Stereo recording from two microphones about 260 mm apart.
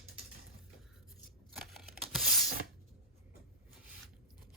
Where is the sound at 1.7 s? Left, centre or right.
Centre.